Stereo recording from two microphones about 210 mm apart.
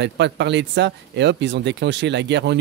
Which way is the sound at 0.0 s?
55° right (ahead or behind).